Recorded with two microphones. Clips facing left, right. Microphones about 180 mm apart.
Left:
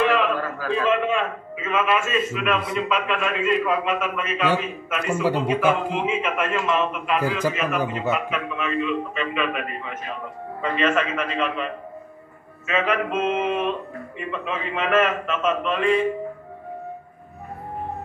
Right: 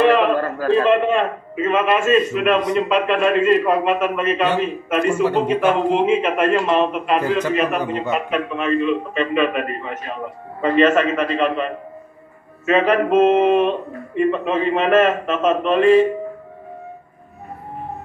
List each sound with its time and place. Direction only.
0.0 s a sound: 35° right (ahead or behind)
0.5 s a man's voice: 35° right (ahead or behind)
5.2 s a man's voice: 10° left (ahead or behind)
5.9 s a man's voice: 35° right (ahead or behind)
7.8 s a man's voice: 10° left (ahead or behind)
8.3 s a man's voice: 35° right (ahead or behind)